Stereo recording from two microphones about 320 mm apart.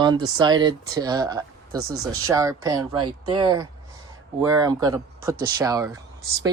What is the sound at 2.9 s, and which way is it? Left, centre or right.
Speech, right.